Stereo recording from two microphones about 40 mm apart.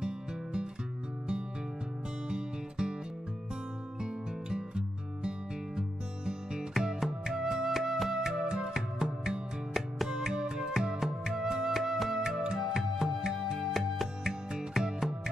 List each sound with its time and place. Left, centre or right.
0.0 s music: centre
2.2 s music: centre
4.0 s music: centre
8.1 s music: centre